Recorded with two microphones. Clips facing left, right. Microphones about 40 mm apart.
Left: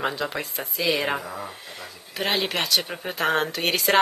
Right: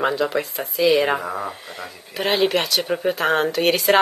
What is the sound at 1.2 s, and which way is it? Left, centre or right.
Speech, right.